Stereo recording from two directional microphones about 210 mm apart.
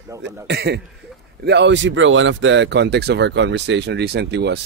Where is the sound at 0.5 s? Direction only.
50° right (ahead or behind).